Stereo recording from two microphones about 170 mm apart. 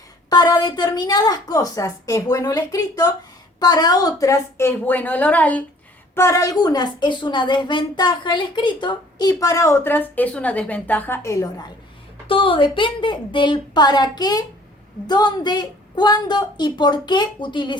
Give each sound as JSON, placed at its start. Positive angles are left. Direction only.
{"t": 0.3, "sound": "a woman's voice", "side_deg": 25}
{"t": 12.3, "sound": "a woman's voice", "side_deg": 30}